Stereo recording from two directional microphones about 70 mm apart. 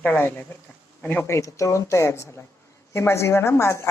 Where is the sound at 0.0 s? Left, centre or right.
Left.